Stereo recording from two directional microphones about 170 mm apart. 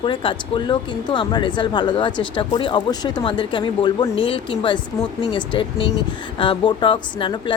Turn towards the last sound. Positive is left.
turn(degrees=30)  # may be behind; listen again after turning